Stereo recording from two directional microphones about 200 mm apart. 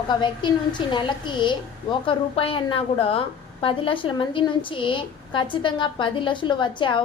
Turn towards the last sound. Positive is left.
turn(degrees=25)  # may be behind; listen again after turning